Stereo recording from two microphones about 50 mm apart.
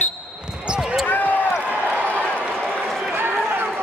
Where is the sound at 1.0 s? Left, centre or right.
Left.